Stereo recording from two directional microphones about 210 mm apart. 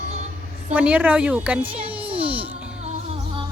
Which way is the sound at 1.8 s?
25° right (ahead or behind).